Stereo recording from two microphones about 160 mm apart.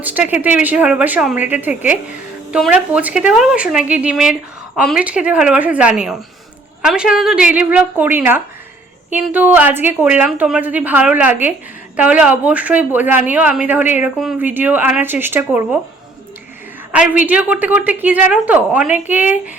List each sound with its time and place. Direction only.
0.0 s a woman's voice: 10° right (ahead or behind)
5.0 s a woman's voice: 10° right (ahead or behind)
16.9 s a woman's voice: 10° right (ahead or behind)